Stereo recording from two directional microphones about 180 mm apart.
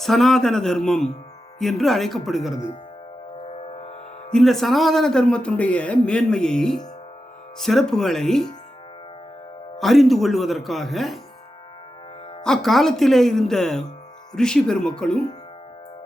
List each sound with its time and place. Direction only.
0.0 s a man's voice: centre (ahead or behind)
3.7 s music: 35° left (ahead or behind)
4.3 s a man's voice: centre (ahead or behind)
9.7 s a man's voice: centre (ahead or behind)
12.4 s a man's voice: centre (ahead or behind)